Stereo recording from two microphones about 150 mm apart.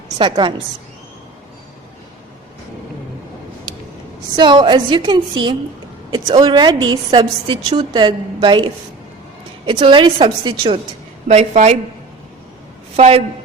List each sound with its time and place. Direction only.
0.2 s a woman's voice: 30° right (ahead or behind)
4.4 s a woman's voice: 30° right (ahead or behind); by 11.8 s 50° right (ahead or behind)
13.0 s a woman's voice: 40° right (ahead or behind)